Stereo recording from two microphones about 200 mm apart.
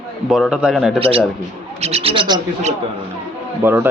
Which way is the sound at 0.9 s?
30° right (ahead or behind).